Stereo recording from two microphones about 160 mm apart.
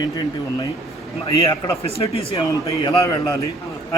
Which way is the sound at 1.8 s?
40° left (ahead or behind).